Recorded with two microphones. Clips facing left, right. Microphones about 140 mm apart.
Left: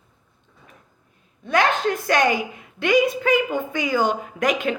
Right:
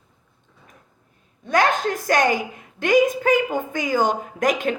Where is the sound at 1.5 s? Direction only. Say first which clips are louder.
Even; 40° right (ahead or behind).